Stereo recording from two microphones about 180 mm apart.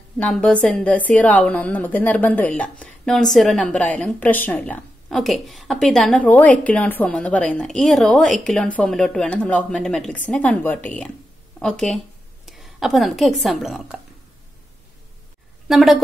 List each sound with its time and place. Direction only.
0.2 s a woman's voice: 5° left (ahead or behind)
15.7 s speech: centre (ahead or behind)